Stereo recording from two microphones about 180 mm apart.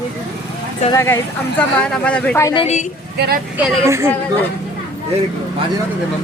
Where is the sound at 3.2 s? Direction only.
60° right (ahead or behind).